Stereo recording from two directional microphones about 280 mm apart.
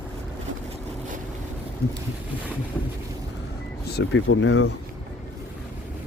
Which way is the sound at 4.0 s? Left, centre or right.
Left.